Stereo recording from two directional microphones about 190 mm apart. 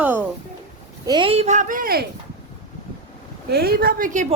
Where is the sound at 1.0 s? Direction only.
25° right (ahead or behind); by 2.1 s 50° right (ahead or behind).